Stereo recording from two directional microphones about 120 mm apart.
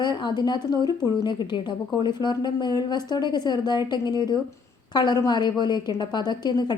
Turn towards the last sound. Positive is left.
turn(degrees=35)  # may be behind; listen again after turning